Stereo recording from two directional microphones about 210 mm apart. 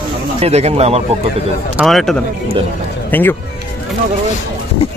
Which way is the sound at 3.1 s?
10° left (ahead or behind).